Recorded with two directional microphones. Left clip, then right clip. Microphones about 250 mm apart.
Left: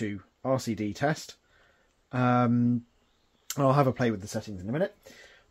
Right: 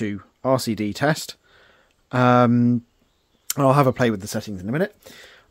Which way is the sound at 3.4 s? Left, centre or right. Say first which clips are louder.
Right 7 dB; right.